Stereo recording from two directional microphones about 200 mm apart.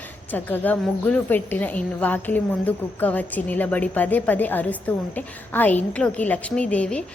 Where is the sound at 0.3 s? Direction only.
10° left (ahead or behind).